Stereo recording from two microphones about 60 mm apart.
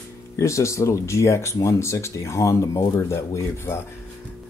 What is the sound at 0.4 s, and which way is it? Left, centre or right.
Speech, left.